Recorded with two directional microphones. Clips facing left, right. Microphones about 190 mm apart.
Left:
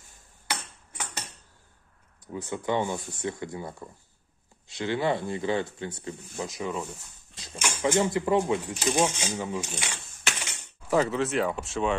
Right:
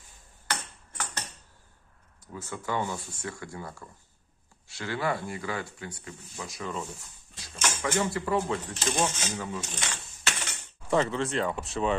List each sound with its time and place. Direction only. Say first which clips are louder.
0.5 s tick-tock: even; 10° left (ahead or behind)
2.3 s speech: left 4 dB; 20° left (ahead or behind)
10.4 s mechanisms: even; 5° left (ahead or behind)